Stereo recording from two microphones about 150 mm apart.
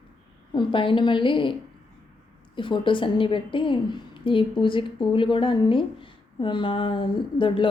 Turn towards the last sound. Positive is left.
turn(degrees=35)  # may be behind; listen again after turning